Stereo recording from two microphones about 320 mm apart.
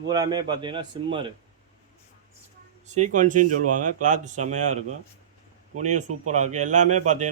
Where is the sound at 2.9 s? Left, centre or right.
Right.